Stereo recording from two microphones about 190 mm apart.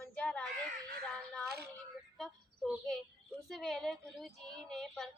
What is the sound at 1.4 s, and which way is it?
Speech, 55° right (ahead or behind).